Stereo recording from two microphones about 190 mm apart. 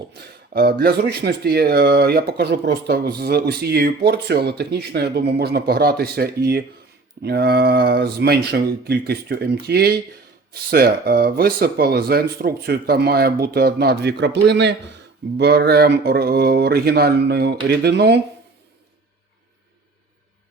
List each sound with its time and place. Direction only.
0.2 s speech: 55° right (ahead or behind)